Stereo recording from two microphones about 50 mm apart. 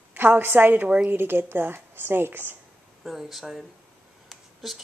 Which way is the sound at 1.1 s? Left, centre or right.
Right.